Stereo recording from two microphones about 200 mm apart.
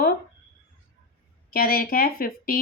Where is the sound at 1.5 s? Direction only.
50° left (ahead or behind).